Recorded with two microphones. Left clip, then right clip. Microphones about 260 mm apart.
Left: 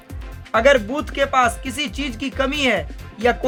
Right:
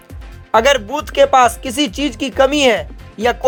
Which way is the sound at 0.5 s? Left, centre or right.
Centre.